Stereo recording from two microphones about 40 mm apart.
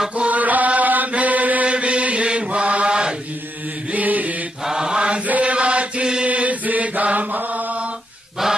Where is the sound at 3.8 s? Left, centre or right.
Right.